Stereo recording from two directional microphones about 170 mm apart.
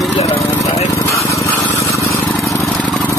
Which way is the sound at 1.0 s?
20° left (ahead or behind).